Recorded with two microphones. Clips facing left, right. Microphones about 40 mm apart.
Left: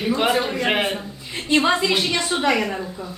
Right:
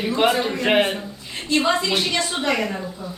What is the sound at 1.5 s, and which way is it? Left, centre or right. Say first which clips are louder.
Speech: left 2 dB; left.